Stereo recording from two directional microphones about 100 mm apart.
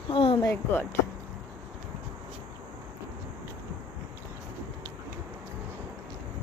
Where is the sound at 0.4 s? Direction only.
20° left (ahead or behind).